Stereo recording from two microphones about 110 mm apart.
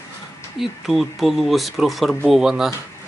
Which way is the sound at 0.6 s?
Centre (ahead or behind).